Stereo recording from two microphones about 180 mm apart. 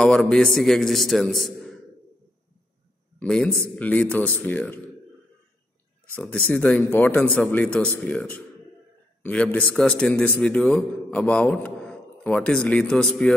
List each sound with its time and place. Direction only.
0.0 s a man's voice: 5° left (ahead or behind)
3.2 s speech: 5° left (ahead or behind)
6.1 s a man's voice: 5° left (ahead or behind)